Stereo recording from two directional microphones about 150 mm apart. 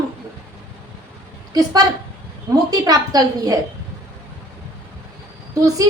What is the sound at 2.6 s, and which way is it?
Speech, 25° right (ahead or behind).